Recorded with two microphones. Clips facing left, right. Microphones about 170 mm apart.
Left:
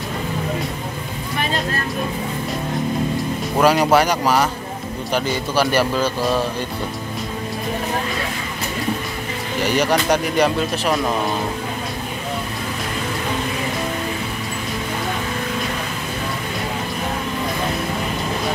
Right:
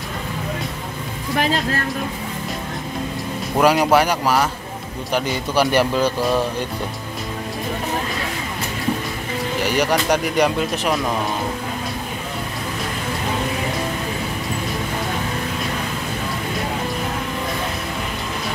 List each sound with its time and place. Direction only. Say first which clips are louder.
3.5 s speech: even; 10° right (ahead or behind)
5.1 s speech: even; 15° right (ahead or behind)
9.8 s speech: left 1 dB; 10° right (ahead or behind)